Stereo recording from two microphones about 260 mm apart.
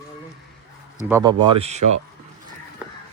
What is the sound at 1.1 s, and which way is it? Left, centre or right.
Speech, centre.